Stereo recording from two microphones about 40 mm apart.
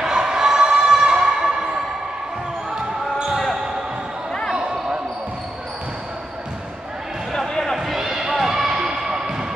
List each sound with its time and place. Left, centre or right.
0.0 s a sound: centre
3.3 s basketball bounce: centre
4.6 s basketball bounce: centre
7.3 s music: centre
7.7 s basketball bounce: centre